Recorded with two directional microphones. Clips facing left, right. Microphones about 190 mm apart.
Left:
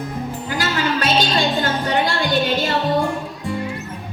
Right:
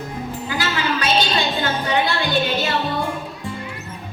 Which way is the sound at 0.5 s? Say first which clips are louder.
Left 2 dB; 45° left (ahead or behind).